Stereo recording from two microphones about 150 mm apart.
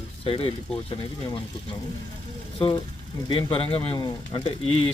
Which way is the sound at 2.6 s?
35° left (ahead or behind).